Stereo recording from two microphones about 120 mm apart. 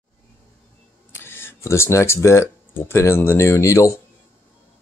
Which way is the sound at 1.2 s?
20° left (ahead or behind).